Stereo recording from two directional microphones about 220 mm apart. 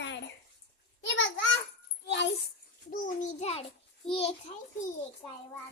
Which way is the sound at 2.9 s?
35° left (ahead or behind).